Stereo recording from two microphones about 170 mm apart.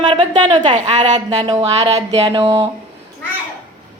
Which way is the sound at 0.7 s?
40° right (ahead or behind).